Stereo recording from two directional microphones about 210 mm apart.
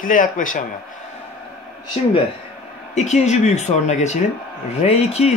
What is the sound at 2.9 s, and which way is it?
Speech, 35° left (ahead or behind).